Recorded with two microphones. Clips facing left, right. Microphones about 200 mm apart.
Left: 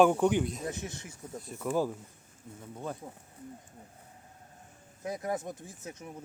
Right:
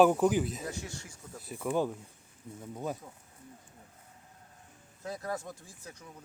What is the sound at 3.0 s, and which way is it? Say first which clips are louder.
Speech: left 5 dB; 25° left (ahead or behind).